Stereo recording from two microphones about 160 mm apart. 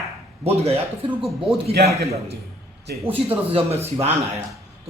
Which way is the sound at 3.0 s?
35° right (ahead or behind).